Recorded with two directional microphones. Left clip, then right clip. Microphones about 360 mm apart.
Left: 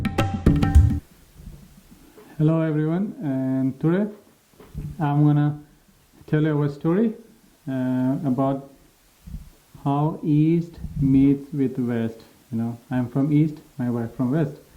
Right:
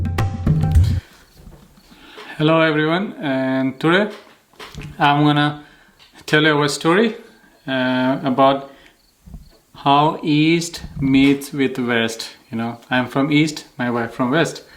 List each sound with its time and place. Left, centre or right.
0.0 s tabla: left
2.1 s speech: centre
9.8 s speech: centre